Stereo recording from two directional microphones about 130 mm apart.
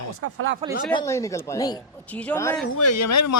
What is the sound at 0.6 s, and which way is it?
Speech, 45° right (ahead or behind).